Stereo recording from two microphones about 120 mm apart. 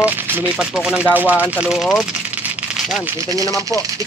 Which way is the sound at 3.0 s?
25° right (ahead or behind).